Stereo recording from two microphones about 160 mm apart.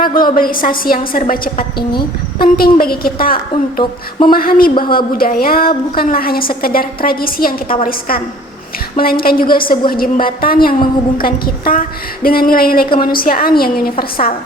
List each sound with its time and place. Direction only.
0.2 s a woman's voice: 60° left (ahead or behind)
3.8 s a sound: 30° left (ahead or behind)
4.3 s a woman's voice: 65° left (ahead or behind)